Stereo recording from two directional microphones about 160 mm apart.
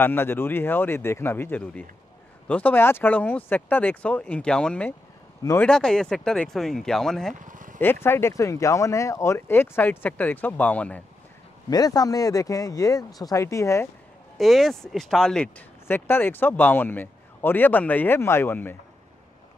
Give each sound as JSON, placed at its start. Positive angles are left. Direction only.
{"t": 0.0, "sound": "speech", "side_deg": 15}
{"t": 5.4, "sound": "speech", "side_deg": 20}
{"t": 5.7, "sound": "speech", "side_deg": 5}
{"t": 7.3, "sound": "a sound", "side_deg": -55}
{"t": 7.8, "sound": "speech", "side_deg": 15}
{"t": 11.7, "sound": "speech", "side_deg": 25}
{"t": 14.4, "sound": "speech", "side_deg": 0}